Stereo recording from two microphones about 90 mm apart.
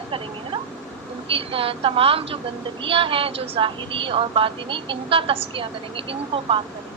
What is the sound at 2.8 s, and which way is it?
A woman's voice, 80° right.